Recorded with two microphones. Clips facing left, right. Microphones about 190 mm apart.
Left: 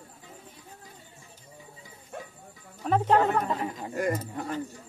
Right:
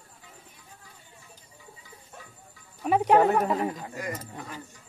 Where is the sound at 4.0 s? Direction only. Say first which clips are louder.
Left 7 dB; 50° left (ahead or behind).